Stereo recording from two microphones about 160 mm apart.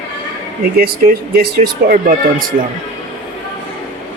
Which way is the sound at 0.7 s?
70° right (ahead or behind).